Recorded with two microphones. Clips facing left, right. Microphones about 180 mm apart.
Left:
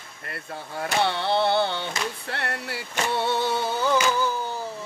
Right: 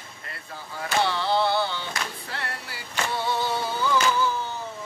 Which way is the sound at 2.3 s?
60° left (ahead or behind).